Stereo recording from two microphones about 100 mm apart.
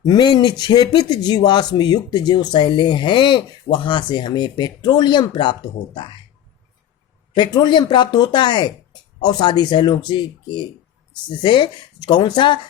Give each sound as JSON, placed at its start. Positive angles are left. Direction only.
{"t": 0.0, "sound": "speech", "side_deg": 45}
{"t": 7.3, "sound": "speech", "side_deg": 45}